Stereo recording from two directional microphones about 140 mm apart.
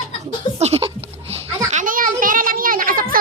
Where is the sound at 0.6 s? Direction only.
45° right (ahead or behind).